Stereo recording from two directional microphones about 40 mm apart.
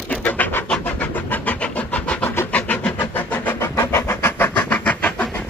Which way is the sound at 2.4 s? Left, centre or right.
Left.